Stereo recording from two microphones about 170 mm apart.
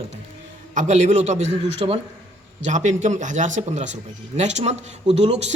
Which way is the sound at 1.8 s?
30° right (ahead or behind).